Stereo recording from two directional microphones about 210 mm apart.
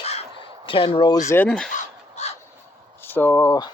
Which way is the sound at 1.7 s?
35° left (ahead or behind).